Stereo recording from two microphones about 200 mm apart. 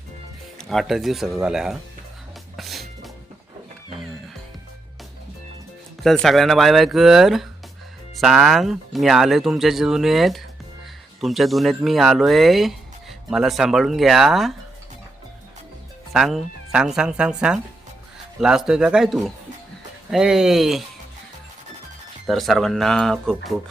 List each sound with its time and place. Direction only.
0.6 s speech: centre (ahead or behind)
2.6 s music: centre (ahead or behind)
6.0 s speech: centre (ahead or behind)
16.1 s speech: centre (ahead or behind)
22.3 s speech: centre (ahead or behind)